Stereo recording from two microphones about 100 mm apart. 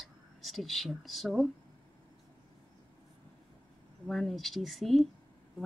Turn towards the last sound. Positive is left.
turn(degrees=0)  # may be behind; listen again after turning